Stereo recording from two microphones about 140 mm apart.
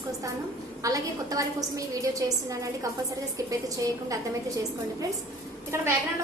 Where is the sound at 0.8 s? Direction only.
25° right (ahead or behind).